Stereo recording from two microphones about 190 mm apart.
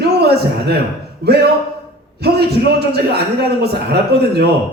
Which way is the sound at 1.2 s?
55° right (ahead or behind).